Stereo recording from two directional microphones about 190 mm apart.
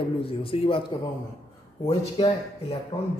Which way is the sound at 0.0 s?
30° left (ahead or behind).